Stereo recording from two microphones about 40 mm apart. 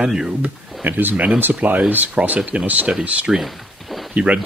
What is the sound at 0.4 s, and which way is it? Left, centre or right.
Speech, right.